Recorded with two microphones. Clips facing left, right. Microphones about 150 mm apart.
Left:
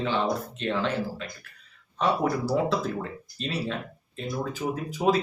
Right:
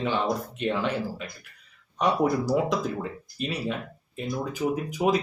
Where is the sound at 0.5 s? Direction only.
15° right (ahead or behind).